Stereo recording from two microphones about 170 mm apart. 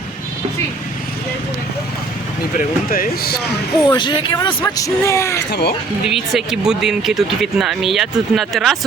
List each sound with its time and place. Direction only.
2.6 s speech: 55° left (ahead or behind)
3.8 s speech: 25° left (ahead or behind)
5.5 s speech: 75° left (ahead or behind)
6.1 s speech: centre (ahead or behind)